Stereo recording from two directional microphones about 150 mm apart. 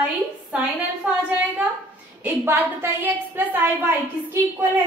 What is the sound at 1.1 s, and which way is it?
A woman's voice, 5° right (ahead or behind).